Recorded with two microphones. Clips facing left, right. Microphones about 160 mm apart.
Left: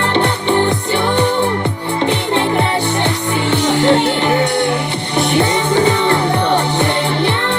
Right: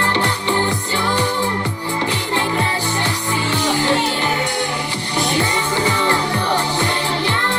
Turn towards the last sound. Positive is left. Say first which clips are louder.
# left 5 dB
turn(degrees=65)  # may be behind; listen again after turning